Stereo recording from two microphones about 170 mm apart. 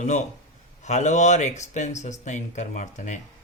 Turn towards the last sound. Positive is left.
turn(degrees=45)  # may be behind; listen again after turning